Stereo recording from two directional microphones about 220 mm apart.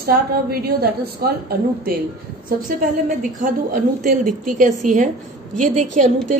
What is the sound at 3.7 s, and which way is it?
A woman's voice, 35° right (ahead or behind).